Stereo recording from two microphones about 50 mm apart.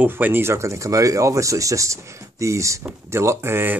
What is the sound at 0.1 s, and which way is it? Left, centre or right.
Speech, right.